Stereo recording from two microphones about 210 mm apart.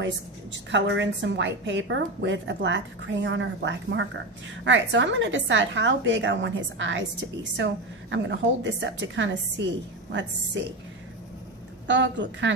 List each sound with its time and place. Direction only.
0.0 s a woman's voice: 60° right (ahead or behind)
11.9 s a woman's voice: 60° right (ahead or behind)